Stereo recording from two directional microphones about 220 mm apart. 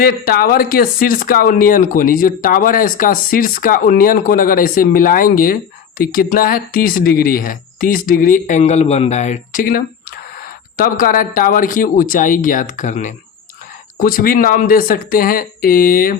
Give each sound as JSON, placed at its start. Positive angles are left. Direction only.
{"t": 0.0, "sound": "speech", "side_deg": 45}